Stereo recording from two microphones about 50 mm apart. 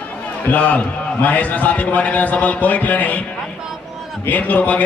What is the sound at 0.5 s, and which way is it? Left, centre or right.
A man's voice, left.